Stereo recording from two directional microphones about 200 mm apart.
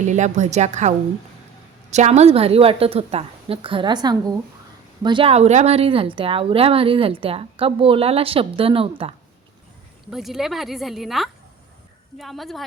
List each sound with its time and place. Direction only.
0.1 s a woman's voice: 35° right (ahead or behind)
10.1 s speech: centre (ahead or behind)